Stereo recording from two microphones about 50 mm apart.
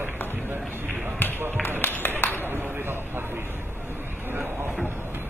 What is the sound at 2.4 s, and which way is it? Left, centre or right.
Vehicle, right.